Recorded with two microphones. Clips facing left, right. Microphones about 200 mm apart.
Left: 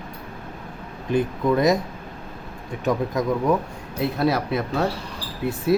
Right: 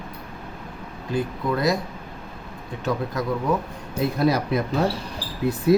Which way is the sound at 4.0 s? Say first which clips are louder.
Right 1 dB; centre (ahead or behind).